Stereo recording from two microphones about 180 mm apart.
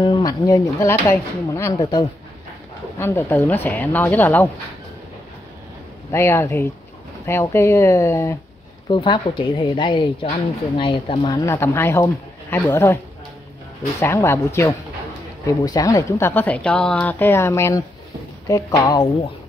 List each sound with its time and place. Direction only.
0.0 s speech: 25° left (ahead or behind)
6.1 s speech: 15° left (ahead or behind)
8.8 s speech: 25° left (ahead or behind)
11.4 s speech: 15° left (ahead or behind)